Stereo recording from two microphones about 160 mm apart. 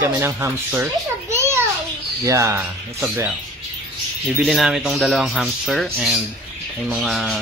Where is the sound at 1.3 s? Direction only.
15° right (ahead or behind).